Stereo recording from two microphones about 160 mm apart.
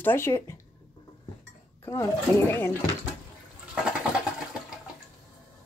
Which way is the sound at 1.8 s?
15° left (ahead or behind).